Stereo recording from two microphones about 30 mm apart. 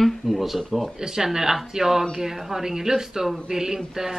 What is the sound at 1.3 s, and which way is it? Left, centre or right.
Speech, centre.